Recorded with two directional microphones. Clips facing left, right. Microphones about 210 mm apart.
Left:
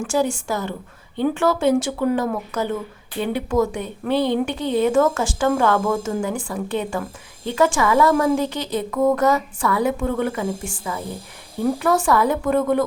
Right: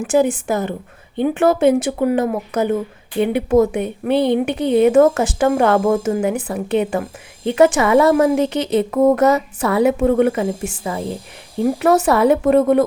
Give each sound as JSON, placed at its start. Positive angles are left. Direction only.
{"t": 0.0, "sound": "a woman's voice", "side_deg": -20}